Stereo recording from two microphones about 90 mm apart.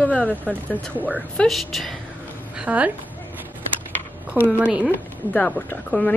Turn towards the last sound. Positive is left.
turn(degrees=10)  # may be behind; listen again after turning